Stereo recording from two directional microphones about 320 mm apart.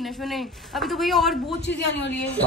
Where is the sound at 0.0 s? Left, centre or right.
Centre.